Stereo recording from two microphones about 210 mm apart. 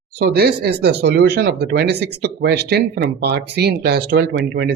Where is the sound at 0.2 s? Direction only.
50° right (ahead or behind).